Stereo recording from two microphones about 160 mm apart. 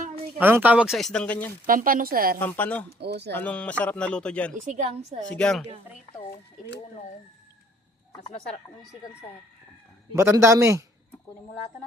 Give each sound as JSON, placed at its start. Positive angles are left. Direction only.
{"t": 0.3, "sound": "speech", "side_deg": -10}
{"t": 1.6, "sound": "a woman's voice", "side_deg": -60}
{"t": 2.4, "sound": "speech", "side_deg": 10}
{"t": 3.0, "sound": "speech", "side_deg": -90}
{"t": 3.3, "sound": "speech", "side_deg": 10}
{"t": 4.5, "sound": "a woman's voice", "side_deg": -50}
{"t": 5.2, "sound": "speech", "side_deg": 5}
{"t": 10.2, "sound": "a man's voice", "side_deg": -15}